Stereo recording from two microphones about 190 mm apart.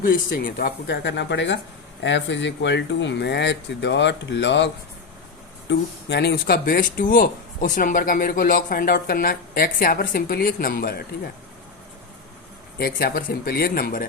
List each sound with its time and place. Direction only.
0.0 s speech: 45° left (ahead or behind)
12.8 s speech: 50° left (ahead or behind)